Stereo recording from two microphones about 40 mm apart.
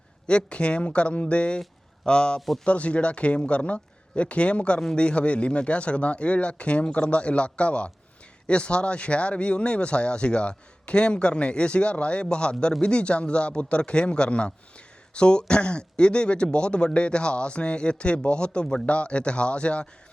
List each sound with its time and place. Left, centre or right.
0.3 s speech: left
2.6 s speech: left